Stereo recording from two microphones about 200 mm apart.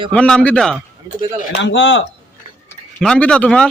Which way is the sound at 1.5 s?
65° left (ahead or behind).